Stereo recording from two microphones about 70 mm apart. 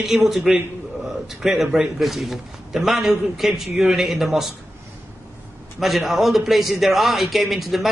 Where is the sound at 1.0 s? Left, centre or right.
Centre.